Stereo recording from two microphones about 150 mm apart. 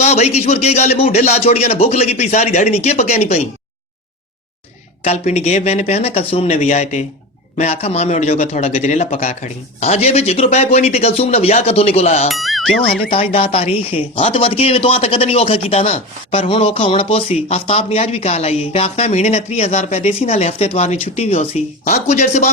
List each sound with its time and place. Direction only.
0.0 s speech: 45° left (ahead or behind)
5.0 s speech: 50° left (ahead or behind)
12.3 s speech: centre (ahead or behind)
13.1 s speech: 40° left (ahead or behind)